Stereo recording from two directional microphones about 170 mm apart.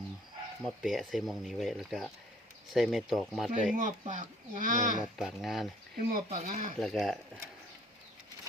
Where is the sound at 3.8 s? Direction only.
45° right (ahead or behind).